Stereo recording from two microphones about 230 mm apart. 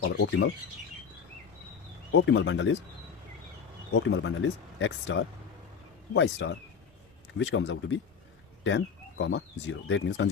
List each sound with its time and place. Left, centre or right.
0.0 s speech: left
2.1 s speech: left
3.9 s speech: left